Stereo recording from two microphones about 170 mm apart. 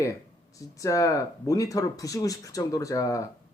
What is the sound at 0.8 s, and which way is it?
Speech, 20° left (ahead or behind).